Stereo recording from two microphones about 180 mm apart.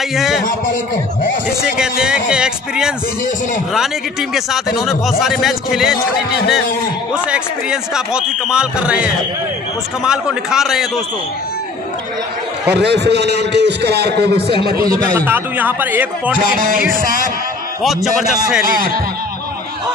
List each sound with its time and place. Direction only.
0.1 s a man's voice: centre (ahead or behind)
1.8 s a man's voice: 5° right (ahead or behind)
5.9 s a man's voice: 60° left (ahead or behind)
7.2 s a man's voice: 5° right (ahead or behind)
12.6 s a man's voice: 65° right (ahead or behind)
15.2 s a man's voice: 10° right (ahead or behind)
16.5 s music: 50° right (ahead or behind)
17.8 s a man's voice: centre (ahead or behind)
18.7 s music: 55° right (ahead or behind)